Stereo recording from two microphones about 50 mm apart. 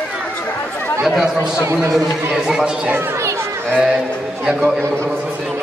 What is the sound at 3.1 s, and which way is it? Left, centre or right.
Chatter, right.